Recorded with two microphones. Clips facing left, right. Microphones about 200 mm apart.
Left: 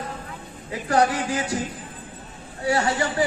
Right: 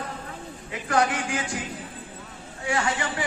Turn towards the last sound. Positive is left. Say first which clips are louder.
# left 4 dB
turn(degrees=40)  # may be behind; listen again after turning